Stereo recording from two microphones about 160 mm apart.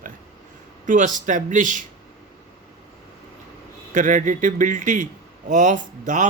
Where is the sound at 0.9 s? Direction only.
55° right (ahead or behind).